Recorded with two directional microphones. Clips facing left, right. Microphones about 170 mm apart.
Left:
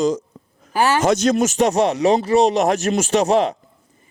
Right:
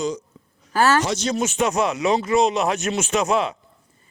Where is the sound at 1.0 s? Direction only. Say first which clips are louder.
Left 7 dB; 50° left (ahead or behind).